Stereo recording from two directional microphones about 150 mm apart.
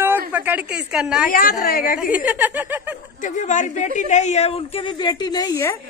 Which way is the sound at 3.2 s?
55° left (ahead or behind).